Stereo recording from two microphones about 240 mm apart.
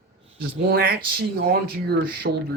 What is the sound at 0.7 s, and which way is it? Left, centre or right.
Speech, right.